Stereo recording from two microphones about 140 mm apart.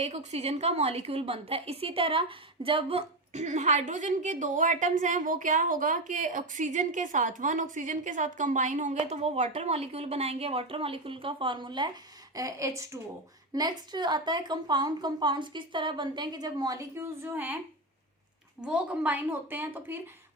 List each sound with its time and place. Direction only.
0.0 s a woman's voice: 50° right (ahead or behind)
3.3 s a woman's voice: 55° right (ahead or behind); by 17.6 s 15° right (ahead or behind)
18.6 s a woman's voice: 10° right (ahead or behind)